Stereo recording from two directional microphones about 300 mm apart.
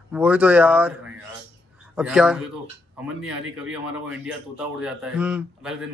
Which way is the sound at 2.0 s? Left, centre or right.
Centre.